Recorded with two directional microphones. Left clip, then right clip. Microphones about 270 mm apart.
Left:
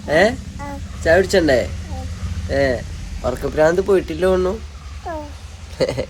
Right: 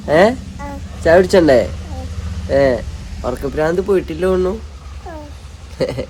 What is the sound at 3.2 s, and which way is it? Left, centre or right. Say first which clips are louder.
Speech: left 2 dB; centre.